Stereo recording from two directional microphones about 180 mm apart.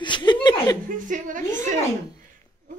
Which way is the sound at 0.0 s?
25° left (ahead or behind).